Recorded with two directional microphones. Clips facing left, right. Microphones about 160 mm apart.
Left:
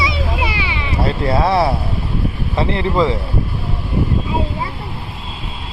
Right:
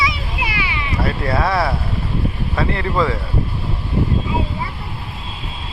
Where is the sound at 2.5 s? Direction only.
25° left (ahead or behind).